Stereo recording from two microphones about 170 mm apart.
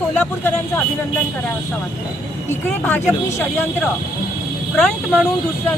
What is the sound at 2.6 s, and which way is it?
Speech, 10° left (ahead or behind).